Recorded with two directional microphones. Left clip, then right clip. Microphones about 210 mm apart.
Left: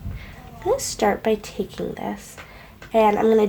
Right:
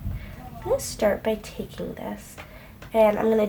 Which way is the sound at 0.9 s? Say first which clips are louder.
Left 1 dB; 40° left (ahead or behind).